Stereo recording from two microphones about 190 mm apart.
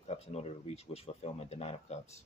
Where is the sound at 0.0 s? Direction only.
35° left (ahead or behind).